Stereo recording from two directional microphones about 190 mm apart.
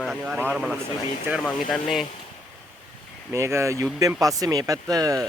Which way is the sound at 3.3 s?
15° right (ahead or behind).